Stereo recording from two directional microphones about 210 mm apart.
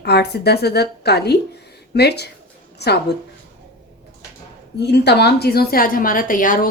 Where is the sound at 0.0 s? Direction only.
50° left (ahead or behind).